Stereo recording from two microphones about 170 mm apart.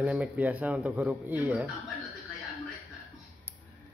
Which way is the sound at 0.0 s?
5° right (ahead or behind).